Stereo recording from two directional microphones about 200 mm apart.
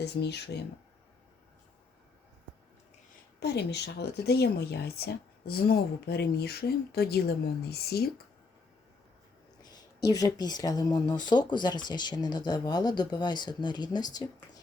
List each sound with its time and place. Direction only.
0.0 s speech: 55° left (ahead or behind)
3.4 s speech: 55° left (ahead or behind)
9.6 s speech: 20° left (ahead or behind)